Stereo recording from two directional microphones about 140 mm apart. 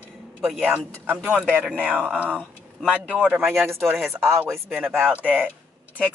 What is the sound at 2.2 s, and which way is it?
Speech, 10° left (ahead or behind).